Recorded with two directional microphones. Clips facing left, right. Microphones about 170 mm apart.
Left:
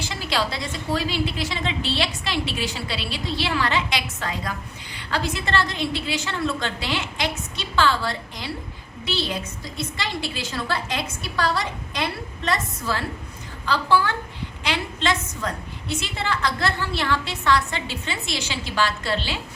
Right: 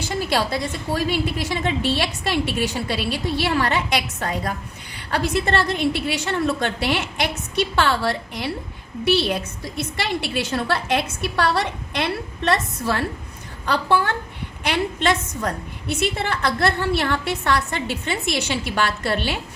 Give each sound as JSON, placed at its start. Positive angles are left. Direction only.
{"t": 0.1, "sound": "a woman's voice", "side_deg": -50}
{"t": 9.0, "sound": "a woman's voice", "side_deg": -65}